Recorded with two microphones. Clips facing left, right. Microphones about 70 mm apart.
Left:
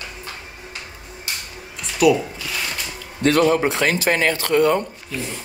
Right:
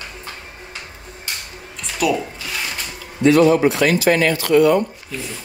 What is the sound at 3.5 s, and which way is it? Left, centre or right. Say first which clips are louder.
Speech: right 3 dB; left.